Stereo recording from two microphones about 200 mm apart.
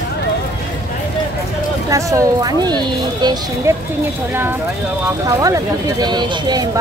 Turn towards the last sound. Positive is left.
turn(degrees=-20)  # may be behind; listen again after turning